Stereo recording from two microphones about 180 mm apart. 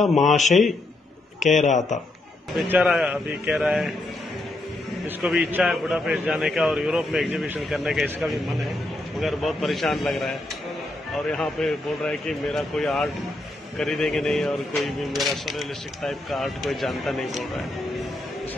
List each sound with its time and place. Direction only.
0.0 s a man's voice: centre (ahead or behind)
1.4 s a man's voice: 40° left (ahead or behind)
2.5 s a man's voice: 5° right (ahead or behind)
5.2 s a man's voice: centre (ahead or behind)
11.3 s a man's voice: 5° left (ahead or behind)